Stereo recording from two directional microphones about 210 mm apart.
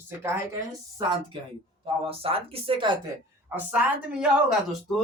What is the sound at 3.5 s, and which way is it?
A woman's voice, 5° right (ahead or behind).